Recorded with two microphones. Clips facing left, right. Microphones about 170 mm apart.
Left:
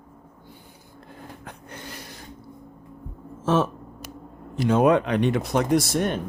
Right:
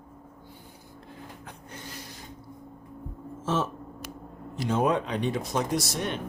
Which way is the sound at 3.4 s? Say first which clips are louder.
Left 6 dB; 60° left (ahead or behind).